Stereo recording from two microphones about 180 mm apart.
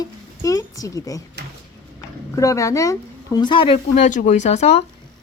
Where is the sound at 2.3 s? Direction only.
15° left (ahead or behind).